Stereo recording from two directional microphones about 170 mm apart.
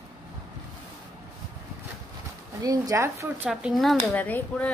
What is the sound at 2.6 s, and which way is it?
Speech, 20° right (ahead or behind).